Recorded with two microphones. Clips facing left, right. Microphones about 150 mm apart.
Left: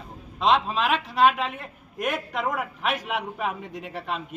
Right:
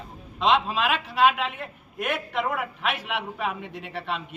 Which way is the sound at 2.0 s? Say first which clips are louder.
Even; 40° left (ahead or behind).